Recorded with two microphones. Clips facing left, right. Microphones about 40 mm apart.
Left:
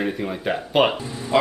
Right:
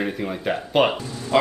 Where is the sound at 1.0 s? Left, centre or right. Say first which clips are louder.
Left 1 dB; centre.